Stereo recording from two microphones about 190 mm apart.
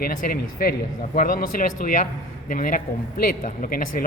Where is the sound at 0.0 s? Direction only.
50° left (ahead or behind).